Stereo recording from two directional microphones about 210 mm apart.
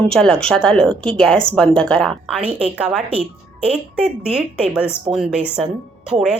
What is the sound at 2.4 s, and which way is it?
Speech, 25° right (ahead or behind).